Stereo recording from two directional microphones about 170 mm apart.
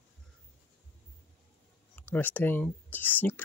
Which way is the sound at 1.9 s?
10° left (ahead or behind).